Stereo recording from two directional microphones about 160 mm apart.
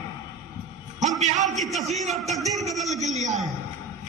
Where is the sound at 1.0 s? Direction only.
45° right (ahead or behind).